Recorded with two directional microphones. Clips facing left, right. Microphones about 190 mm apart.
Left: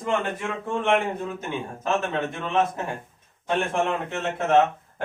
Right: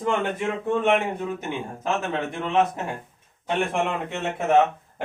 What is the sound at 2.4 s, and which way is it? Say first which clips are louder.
A man's voice: right 3 dB; 15° right (ahead or behind).